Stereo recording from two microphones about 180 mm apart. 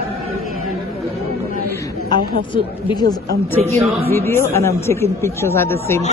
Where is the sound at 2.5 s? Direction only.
25° left (ahead or behind).